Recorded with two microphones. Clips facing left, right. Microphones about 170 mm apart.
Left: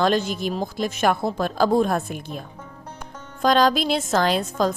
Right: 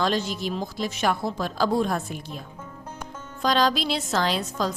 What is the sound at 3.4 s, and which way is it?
A woman's voice, 50° left (ahead or behind).